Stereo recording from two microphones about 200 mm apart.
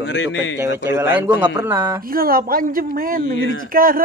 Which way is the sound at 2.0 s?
45° right (ahead or behind).